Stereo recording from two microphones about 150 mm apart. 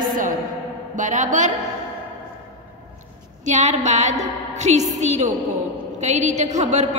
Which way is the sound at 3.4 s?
50° right (ahead or behind).